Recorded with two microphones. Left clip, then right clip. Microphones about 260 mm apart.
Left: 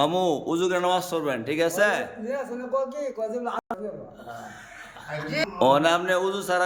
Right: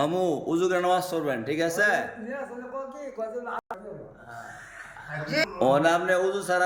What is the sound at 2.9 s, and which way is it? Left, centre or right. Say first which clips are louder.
Speech: left 4 dB; left.